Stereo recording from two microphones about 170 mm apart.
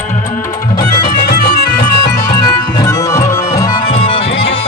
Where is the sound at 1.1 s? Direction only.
60° left (ahead or behind).